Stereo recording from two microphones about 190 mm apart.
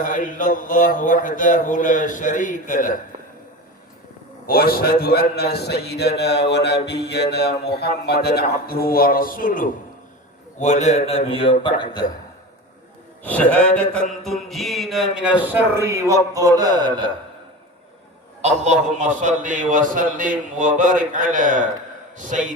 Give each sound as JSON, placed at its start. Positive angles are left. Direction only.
{"t": 0.0, "sound": "a man's voice", "side_deg": 45}
{"t": 4.4, "sound": "a man's voice", "side_deg": 50}
{"t": 13.2, "sound": "music", "side_deg": 10}
{"t": 15.1, "sound": "a man's voice", "side_deg": -5}
{"t": 18.4, "sound": "a man's voice", "side_deg": -35}